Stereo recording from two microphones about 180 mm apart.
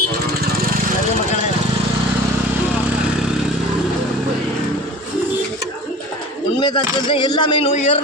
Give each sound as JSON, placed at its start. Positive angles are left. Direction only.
{"t": 6.6, "sound": "speech", "side_deg": 25}